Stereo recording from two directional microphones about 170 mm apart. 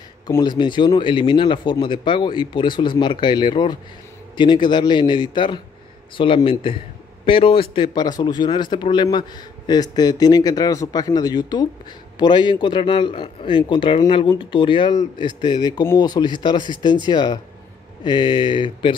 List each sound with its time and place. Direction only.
0.3 s speech: 25° left (ahead or behind)